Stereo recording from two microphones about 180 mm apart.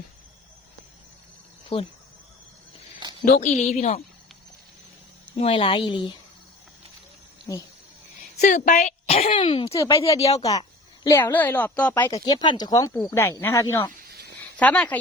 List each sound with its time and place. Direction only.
1.7 s speech: 35° left (ahead or behind)
3.0 s a sound: 25° right (ahead or behind)
3.3 s speech: 35° left (ahead or behind)
5.4 s speech: 30° left (ahead or behind)
7.5 s speech: 20° left (ahead or behind)
8.4 s speech: 45° left (ahead or behind); by 9.7 s 30° left (ahead or behind)
9.7 s a woman's voice: 15° left (ahead or behind)
10.1 s speech: 35° left (ahead or behind)
10.4 s a woman's voice: 20° left (ahead or behind)
12.0 s a woman's voice: 25° left (ahead or behind)
14.1 s a sound: 65° right (ahead or behind)
14.5 s speech: 10° left (ahead or behind)